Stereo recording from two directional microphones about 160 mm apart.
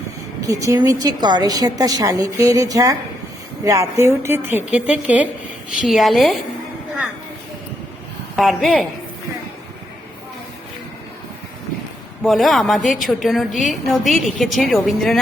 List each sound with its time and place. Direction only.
0.4 s a woman's voice: 20° right (ahead or behind); by 6.4 s centre (ahead or behind)
8.4 s a woman's voice: centre (ahead or behind)
12.2 s a woman's voice: centre (ahead or behind)